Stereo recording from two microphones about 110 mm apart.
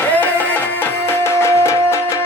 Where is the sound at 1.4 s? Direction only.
25° left (ahead or behind).